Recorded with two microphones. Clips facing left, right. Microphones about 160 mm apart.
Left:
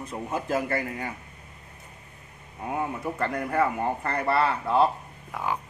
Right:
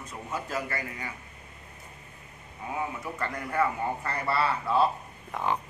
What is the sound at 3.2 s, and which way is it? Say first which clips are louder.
A man's voice: left 3 dB; 50° left (ahead or behind).